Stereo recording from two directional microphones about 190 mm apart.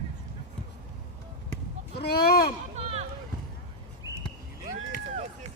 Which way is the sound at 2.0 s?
55° left (ahead or behind).